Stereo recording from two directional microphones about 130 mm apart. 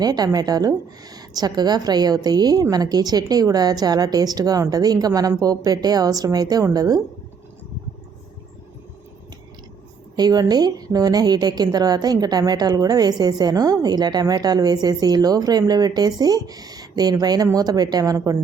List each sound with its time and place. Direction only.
0.0 s a woman's voice: 30° right (ahead or behind)
10.2 s a woman's voice: 30° right (ahead or behind)